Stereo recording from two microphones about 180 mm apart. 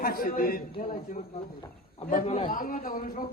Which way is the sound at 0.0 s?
55° left (ahead or behind).